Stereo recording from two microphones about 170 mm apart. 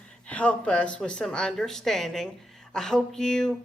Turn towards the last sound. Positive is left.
turn(degrees=5)  # may be behind; listen again after turning